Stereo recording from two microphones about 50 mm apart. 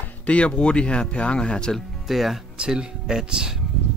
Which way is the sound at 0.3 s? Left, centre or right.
Left.